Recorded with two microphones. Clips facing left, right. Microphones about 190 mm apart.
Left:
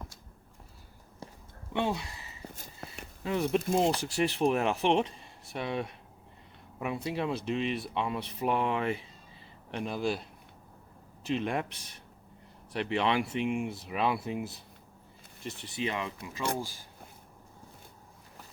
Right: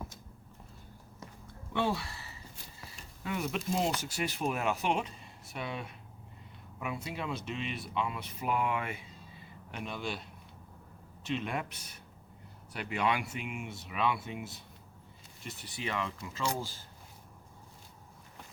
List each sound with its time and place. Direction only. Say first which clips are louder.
1.2 s a sound: left 3 dB; 30° left (ahead or behind)
1.7 s speech: left 1 dB; 20° left (ahead or behind)
2.6 s a sound: left 5 dB; 55° left (ahead or behind)
3.2 s speech: left 6 dB; 30° left (ahead or behind)
3.6 s speech: left 5 dB; 55° left (ahead or behind)
3.9 s speech: left 6 dB; 30° left (ahead or behind)
11.3 s speech: left 4 dB; 30° left (ahead or behind)
15.4 s speech: left 5 dB; 25° left (ahead or behind)